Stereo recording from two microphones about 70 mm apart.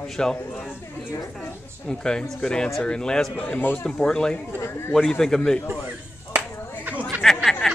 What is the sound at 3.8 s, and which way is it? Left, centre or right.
Speech, centre.